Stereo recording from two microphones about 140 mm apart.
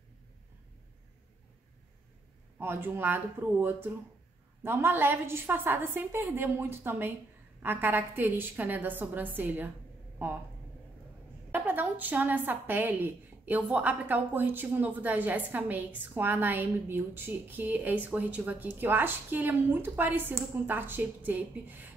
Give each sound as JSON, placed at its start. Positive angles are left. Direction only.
{"t": 2.6, "sound": "a woman's voice", "side_deg": -15}
{"t": 4.6, "sound": "a woman's voice", "side_deg": -15}
{"t": 11.5, "sound": "a woman's voice", "side_deg": -10}